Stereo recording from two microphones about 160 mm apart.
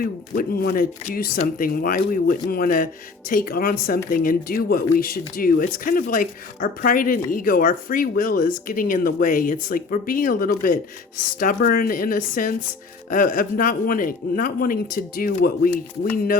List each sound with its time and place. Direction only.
0.0 s speech: 65° left (ahead or behind)